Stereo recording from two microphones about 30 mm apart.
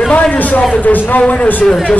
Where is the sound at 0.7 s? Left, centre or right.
Left.